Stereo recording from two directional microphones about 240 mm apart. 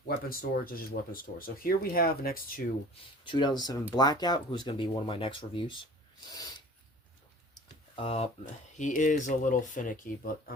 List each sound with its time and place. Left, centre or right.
0.3 s speech: left
3.2 s speech: centre
7.9 s speech: left